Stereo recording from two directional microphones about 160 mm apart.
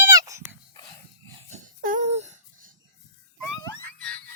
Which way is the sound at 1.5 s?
50° right (ahead or behind).